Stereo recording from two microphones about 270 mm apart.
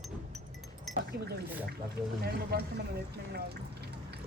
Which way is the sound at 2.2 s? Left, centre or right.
Right.